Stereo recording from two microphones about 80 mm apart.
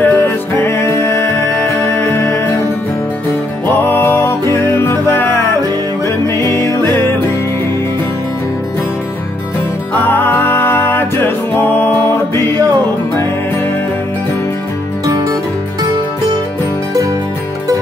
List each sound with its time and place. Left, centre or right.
0.0 s music: left
0.7 s music: left
2.0 s music: left
2.2 s music: left
3.6 s music: left
10.0 s music: left
15.0 s music: right